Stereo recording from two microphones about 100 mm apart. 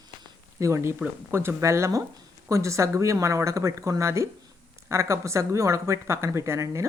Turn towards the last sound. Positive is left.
turn(degrees=-30)  # may be behind; listen again after turning